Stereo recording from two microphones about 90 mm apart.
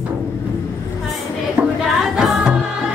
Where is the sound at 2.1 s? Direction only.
5° right (ahead or behind).